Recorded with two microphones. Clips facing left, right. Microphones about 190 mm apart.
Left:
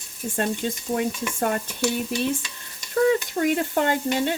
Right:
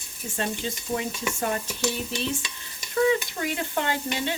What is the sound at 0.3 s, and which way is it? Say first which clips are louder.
Sizzle: left 4 dB; 50° left (ahead or behind).